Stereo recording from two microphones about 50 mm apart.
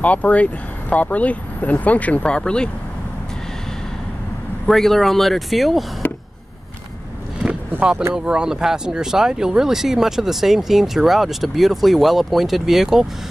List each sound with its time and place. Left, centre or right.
0.0 s speech: left
4.6 s speech: centre
8.1 s speech: centre